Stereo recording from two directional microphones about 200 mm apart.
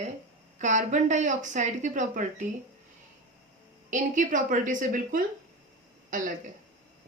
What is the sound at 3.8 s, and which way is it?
Speech, 40° right (ahead or behind).